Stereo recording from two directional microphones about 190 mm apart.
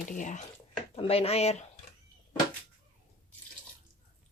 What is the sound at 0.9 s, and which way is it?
Speech, 30° left (ahead or behind).